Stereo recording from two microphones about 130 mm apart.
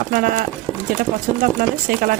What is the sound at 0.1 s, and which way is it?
Speech, 90° right.